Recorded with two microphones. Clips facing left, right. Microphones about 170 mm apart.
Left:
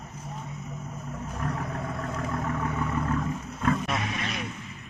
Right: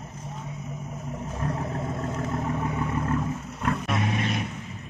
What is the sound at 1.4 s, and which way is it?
Vehicle, 25° right (ahead or behind).